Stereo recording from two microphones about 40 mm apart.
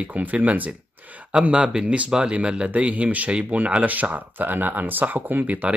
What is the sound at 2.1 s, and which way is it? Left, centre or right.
Speech, right.